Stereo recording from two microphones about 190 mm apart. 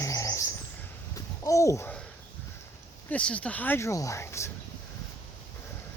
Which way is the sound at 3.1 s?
5° left (ahead or behind).